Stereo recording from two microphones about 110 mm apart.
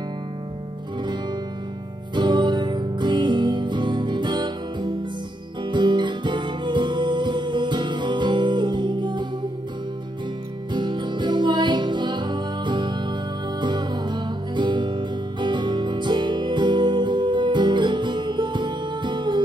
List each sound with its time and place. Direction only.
2.1 s music: 45° right (ahead or behind)
10.7 s music: 45° right (ahead or behind)